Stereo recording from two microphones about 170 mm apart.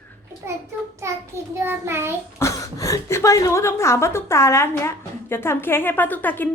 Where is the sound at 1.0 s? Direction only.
15° right (ahead or behind).